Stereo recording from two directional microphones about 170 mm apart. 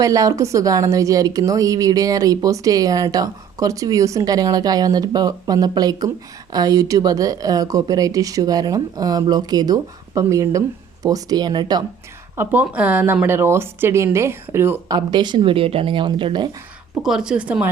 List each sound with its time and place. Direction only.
0.0 s a woman's voice: 20° right (ahead or behind)
12.4 s speech: 10° right (ahead or behind)
14.9 s a woman's voice: 25° right (ahead or behind)
17.0 s speech: 5° right (ahead or behind)